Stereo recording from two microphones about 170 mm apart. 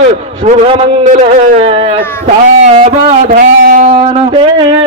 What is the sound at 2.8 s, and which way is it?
A man's voice, 55° right (ahead or behind).